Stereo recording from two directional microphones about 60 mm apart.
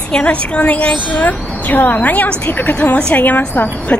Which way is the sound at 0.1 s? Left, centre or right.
Left.